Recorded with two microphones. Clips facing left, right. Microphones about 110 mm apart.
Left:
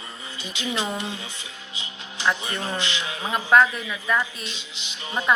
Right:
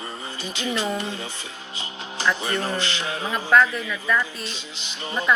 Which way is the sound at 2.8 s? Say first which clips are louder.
Right 2 dB; 40° right (ahead or behind).